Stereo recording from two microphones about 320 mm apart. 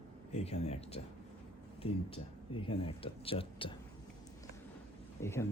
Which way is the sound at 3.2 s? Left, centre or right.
Centre.